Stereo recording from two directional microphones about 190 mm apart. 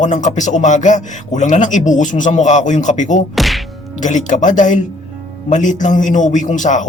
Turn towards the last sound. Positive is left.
turn(degrees=40)  # may be behind; listen again after turning